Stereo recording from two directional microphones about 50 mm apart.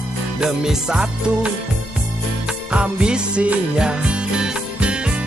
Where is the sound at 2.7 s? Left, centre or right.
Centre.